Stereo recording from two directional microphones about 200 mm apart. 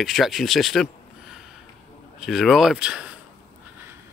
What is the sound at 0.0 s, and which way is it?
Speech, centre (ahead or behind).